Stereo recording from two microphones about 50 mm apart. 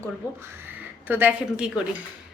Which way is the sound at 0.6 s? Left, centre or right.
Right.